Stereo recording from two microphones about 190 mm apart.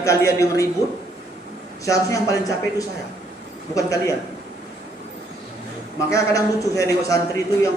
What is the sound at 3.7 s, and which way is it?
Speech, 15° left (ahead or behind).